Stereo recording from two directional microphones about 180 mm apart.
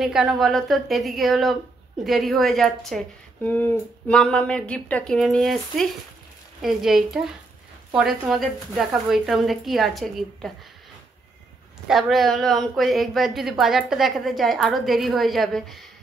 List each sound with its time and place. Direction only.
0.0 s a woman's voice: centre (ahead or behind)
11.9 s a woman's voice: centre (ahead or behind)